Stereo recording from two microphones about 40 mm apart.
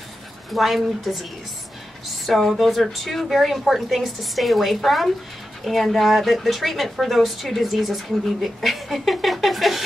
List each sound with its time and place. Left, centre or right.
0.5 s a woman's voice: centre
2.2 s a woman's voice: centre